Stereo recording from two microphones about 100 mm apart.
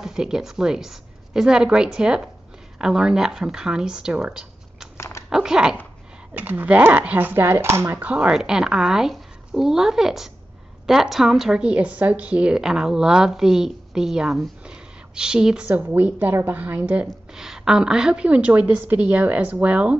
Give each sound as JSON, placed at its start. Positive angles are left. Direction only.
{"t": 0.0, "sound": "a woman's voice", "side_deg": -5}
{"t": 4.9, "sound": "a sound", "side_deg": 30}
{"t": 5.3, "sound": "a woman's voice", "side_deg": -5}
{"t": 6.3, "sound": "speech", "side_deg": -20}
{"t": 8.0, "sound": "a woman's voice", "side_deg": -10}